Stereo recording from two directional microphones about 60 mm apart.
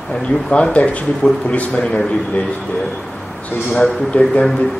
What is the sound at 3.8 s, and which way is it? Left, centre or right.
Speech, centre.